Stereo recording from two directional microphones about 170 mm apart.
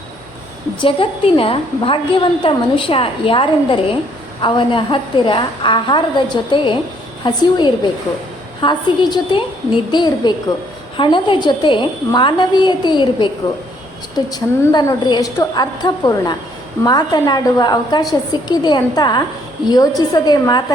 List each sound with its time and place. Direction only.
0.8 s a woman's voice: 30° left (ahead or behind)